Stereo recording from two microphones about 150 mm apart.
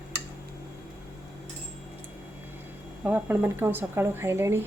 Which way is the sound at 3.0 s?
10° right (ahead or behind).